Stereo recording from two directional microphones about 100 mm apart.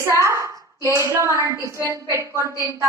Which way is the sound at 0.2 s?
30° right (ahead or behind).